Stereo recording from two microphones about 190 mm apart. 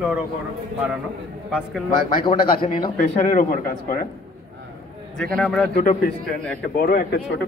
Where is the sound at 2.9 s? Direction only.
45° left (ahead or behind).